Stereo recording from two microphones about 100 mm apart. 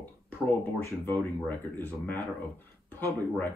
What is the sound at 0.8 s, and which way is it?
Speech, 20° left (ahead or behind).